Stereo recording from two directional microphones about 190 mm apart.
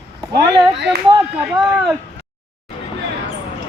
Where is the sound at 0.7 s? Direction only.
65° right (ahead or behind).